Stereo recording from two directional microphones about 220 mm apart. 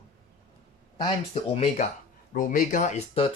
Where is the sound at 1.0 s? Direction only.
30° left (ahead or behind).